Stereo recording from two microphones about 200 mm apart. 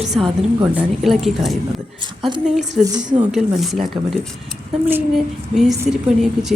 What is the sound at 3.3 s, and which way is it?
Speech, centre (ahead or behind).